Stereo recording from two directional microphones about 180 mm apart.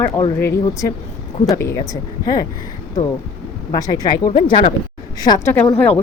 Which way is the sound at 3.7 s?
20° left (ahead or behind).